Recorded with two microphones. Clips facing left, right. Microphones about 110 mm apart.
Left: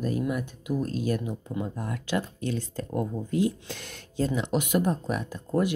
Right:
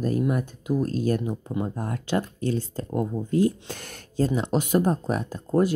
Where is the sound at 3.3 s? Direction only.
45° right (ahead or behind).